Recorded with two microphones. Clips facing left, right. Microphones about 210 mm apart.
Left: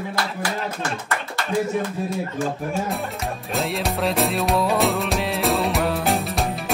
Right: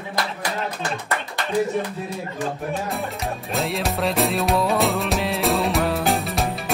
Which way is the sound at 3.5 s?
Centre (ahead or behind).